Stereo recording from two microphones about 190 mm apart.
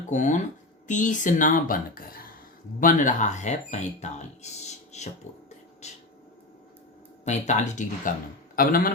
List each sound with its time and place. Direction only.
0.1 s a woman's voice: 40° left (ahead or behind)
7.3 s a woman's voice: 40° left (ahead or behind)